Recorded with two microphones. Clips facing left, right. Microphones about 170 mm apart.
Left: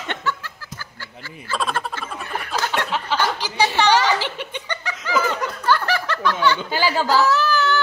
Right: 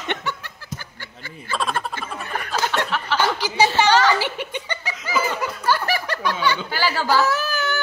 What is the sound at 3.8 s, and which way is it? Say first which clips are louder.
Speech: left 1 dB; 15° left (ahead or behind).